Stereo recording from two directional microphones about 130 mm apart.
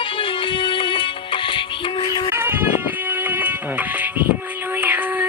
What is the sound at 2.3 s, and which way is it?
Music, 15° right (ahead or behind).